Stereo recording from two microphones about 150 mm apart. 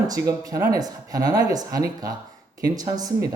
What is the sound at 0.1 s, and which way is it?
Speech, 25° right (ahead or behind).